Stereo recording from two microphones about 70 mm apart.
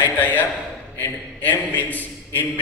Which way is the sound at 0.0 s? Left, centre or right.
Left.